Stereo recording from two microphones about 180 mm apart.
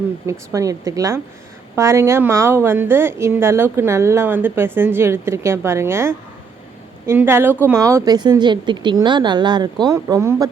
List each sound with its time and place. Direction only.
0.3 s a woman's voice: 20° right (ahead or behind)